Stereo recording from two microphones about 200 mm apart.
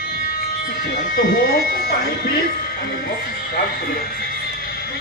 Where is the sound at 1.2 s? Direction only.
50° left (ahead or behind).